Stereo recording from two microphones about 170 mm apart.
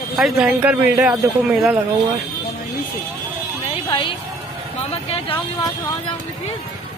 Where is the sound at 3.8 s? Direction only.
25° left (ahead or behind).